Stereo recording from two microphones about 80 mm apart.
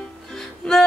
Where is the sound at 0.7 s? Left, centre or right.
Centre.